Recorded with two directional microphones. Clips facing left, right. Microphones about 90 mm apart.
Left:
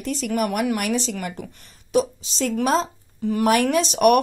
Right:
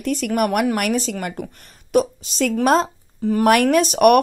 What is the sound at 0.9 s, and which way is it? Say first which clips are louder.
A woman's voice: right 2 dB; 45° right (ahead or behind).